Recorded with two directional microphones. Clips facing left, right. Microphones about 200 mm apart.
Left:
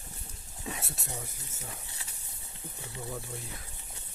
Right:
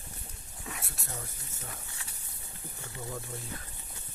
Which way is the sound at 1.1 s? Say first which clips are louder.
Left 1 dB; 10° left (ahead or behind).